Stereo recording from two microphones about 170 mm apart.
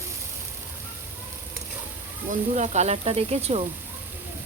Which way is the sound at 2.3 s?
45° right (ahead or behind).